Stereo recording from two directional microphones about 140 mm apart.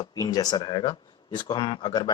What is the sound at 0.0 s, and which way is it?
Speech, 25° left (ahead or behind).